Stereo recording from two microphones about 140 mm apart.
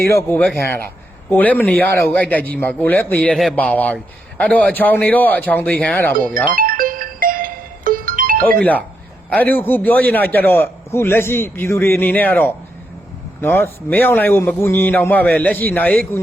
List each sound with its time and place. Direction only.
0.2 s a man's voice: 15° left (ahead or behind)
6.1 s speech: 80° right
6.5 s music: 90° right
9.3 s a man's voice: 15° left (ahead or behind)